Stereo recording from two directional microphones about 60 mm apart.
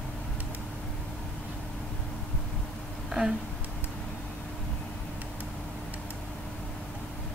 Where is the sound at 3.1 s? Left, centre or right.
Centre.